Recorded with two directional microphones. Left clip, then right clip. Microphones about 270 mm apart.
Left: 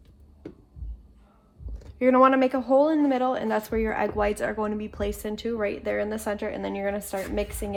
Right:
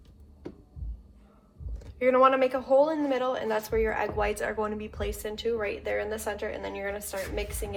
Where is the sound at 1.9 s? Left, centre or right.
Left.